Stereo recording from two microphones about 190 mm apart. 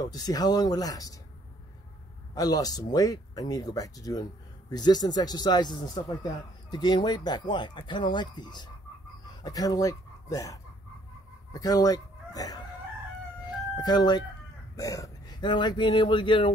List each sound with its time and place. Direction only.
0.0 s speech: 20° left (ahead or behind)
2.3 s speech: 20° left (ahead or behind)
13.7 s speech: 20° left (ahead or behind)